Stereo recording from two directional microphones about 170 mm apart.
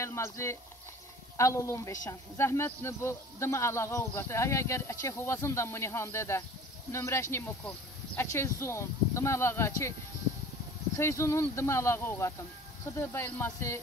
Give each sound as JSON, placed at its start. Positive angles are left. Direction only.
{"t": 0.0, "sound": "a woman's voice", "side_deg": 15}
{"t": 11.0, "sound": "a woman's voice", "side_deg": 15}